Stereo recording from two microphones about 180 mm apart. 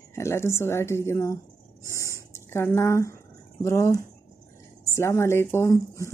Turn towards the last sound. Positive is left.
turn(degrees=15)  # may be behind; listen again after turning